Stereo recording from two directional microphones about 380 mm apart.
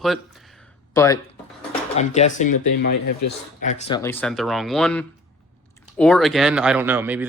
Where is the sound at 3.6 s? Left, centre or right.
Centre.